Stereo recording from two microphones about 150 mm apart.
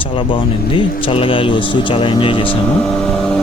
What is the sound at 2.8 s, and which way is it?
Vehicle, 5° left (ahead or behind).